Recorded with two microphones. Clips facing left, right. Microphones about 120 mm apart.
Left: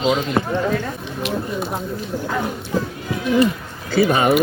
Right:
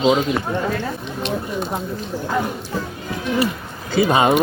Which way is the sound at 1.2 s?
5° left (ahead or behind).